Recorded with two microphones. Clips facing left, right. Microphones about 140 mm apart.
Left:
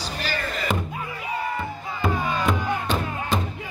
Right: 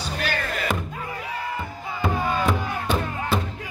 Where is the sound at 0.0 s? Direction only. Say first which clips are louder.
Right 2 dB; 60° right (ahead or behind).